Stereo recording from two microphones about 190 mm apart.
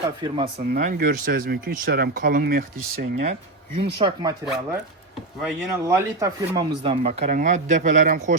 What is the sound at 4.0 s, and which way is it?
Speech, 30° right (ahead or behind).